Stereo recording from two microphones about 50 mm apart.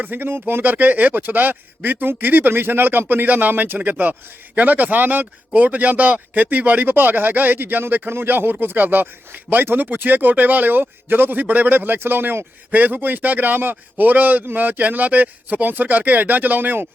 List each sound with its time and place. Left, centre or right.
0.0 s speech: right